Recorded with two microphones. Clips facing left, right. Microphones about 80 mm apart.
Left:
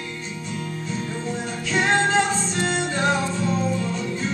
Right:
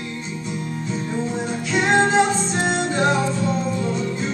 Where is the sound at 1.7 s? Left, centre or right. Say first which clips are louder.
Right 3 dB; centre.